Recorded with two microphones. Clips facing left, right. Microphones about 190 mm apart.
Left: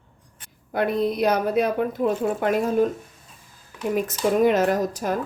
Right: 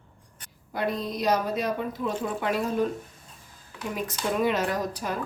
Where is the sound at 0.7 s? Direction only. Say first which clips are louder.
Left 7 dB; 60° left (ahead or behind).